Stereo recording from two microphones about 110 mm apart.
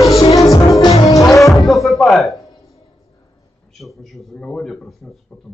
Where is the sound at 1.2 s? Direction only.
Centre (ahead or behind).